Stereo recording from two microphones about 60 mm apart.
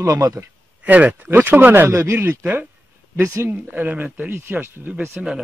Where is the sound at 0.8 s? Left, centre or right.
Right.